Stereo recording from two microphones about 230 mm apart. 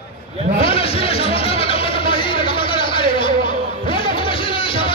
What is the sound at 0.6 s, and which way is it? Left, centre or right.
Music, left.